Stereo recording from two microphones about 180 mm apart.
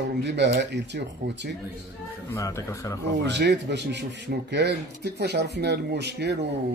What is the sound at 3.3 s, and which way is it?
Speech, 75° right (ahead or behind).